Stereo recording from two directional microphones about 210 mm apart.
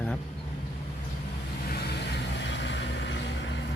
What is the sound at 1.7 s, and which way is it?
Vehicle, 50° left (ahead or behind).